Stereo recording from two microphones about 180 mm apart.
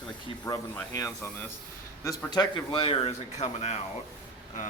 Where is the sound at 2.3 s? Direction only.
25° left (ahead or behind).